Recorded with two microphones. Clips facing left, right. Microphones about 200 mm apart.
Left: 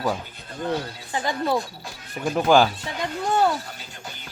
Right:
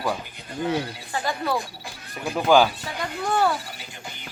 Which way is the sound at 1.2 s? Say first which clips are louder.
Left 2 dB; 20° left (ahead or behind).